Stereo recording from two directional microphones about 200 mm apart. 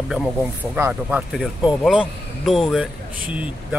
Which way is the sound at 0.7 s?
10° right (ahead or behind).